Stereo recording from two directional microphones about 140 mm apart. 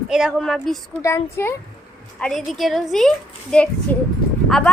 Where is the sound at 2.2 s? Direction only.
5° left (ahead or behind).